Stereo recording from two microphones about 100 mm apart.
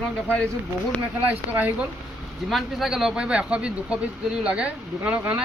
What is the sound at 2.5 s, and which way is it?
Speech, centre (ahead or behind).